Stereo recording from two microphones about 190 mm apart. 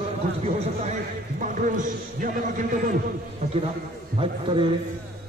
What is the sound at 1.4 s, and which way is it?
A man's voice, 40° right (ahead or behind).